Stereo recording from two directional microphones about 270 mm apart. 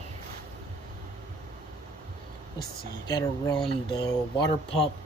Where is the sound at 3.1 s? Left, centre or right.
Centre.